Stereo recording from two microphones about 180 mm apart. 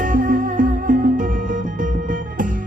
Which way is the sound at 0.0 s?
50° right (ahead or behind).